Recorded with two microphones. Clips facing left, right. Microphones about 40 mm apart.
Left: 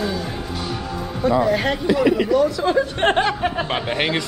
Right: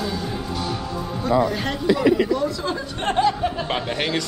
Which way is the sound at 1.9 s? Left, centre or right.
Left.